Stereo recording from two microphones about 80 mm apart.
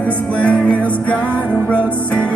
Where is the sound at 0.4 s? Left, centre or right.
Centre.